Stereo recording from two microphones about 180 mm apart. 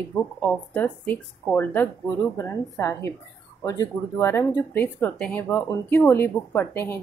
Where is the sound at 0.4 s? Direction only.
10° left (ahead or behind).